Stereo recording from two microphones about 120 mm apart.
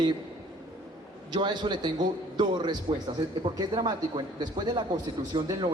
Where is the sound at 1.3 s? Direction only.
40° right (ahead or behind).